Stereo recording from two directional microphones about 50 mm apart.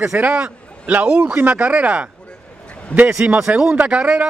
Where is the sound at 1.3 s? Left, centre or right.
Right.